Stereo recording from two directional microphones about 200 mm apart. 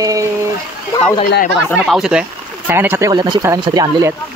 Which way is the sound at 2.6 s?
10° right (ahead or behind).